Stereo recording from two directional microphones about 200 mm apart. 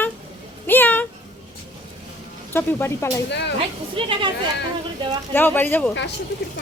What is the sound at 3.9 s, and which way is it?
Speech, 25° right (ahead or behind).